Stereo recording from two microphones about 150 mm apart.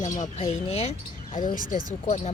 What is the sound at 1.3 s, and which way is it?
Speech, 60° left (ahead or behind).